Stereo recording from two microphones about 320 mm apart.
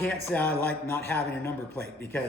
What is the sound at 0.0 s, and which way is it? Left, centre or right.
A man's voice, centre.